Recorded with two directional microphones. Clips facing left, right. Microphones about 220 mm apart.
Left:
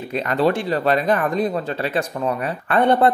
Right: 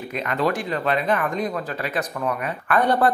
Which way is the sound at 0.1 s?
30° left (ahead or behind).